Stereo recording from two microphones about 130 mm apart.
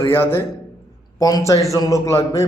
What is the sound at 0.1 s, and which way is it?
A man's voice, 15° left (ahead or behind).